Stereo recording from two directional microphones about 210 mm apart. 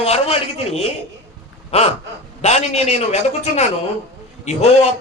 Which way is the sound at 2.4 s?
30° left (ahead or behind).